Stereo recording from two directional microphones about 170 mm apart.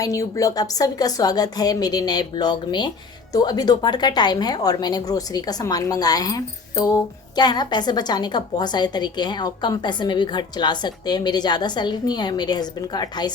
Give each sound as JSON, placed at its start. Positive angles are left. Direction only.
{"t": 0.0, "sound": "a woman's voice", "side_deg": 20}